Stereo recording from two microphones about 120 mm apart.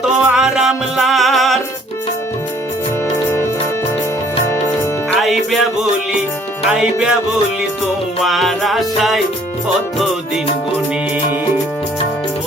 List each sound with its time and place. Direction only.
0.0 s music: 5° right (ahead or behind)
4.4 s music: 20° left (ahead or behind)
5.2 s music: centre (ahead or behind)
6.7 s music: 5° right (ahead or behind)
8.2 s music: centre (ahead or behind)